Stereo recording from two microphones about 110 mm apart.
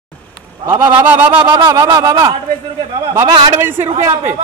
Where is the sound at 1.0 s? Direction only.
15° right (ahead or behind).